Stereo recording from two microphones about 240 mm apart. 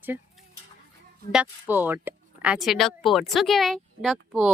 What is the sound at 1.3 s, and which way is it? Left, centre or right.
Speech, centre.